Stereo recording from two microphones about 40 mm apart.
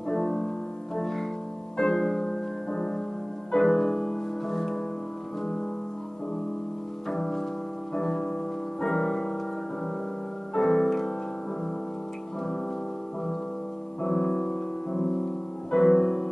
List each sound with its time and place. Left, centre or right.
0.1 s music: centre
7.1 s piano: centre
7.9 s music: centre
10.5 s music: centre
14.0 s music: centre